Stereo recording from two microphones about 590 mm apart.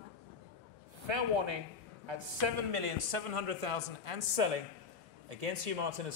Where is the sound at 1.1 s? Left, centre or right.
Right.